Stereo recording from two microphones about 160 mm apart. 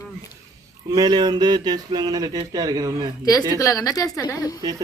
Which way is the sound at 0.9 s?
25° right (ahead or behind).